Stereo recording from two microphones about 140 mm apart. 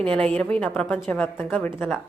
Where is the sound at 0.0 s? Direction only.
5° left (ahead or behind).